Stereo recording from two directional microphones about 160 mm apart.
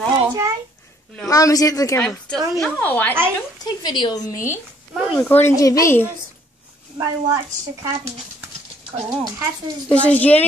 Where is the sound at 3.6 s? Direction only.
25° left (ahead or behind).